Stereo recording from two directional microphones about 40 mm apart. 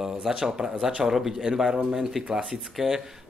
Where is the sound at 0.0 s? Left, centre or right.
Centre.